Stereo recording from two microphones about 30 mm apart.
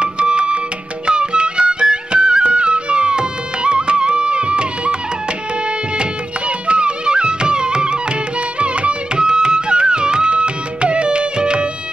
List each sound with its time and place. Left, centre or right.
0.0 s music: right
5.9 s music: right
8.5 s music: right
9.1 s music: right